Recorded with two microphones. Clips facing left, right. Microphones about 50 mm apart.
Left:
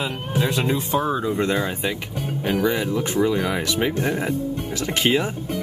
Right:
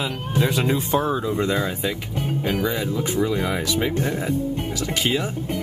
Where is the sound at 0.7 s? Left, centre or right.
Centre.